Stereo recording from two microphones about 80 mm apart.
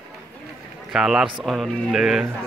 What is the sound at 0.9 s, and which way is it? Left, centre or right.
Speech, centre.